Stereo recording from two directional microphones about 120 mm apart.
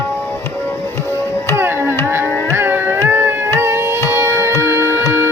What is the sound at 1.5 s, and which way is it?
Music, 20° right (ahead or behind).